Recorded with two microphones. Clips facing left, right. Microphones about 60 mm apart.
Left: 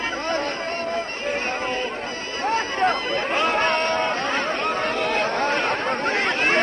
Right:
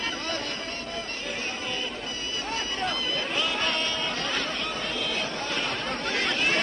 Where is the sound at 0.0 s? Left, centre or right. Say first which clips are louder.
Left 7 dB; left.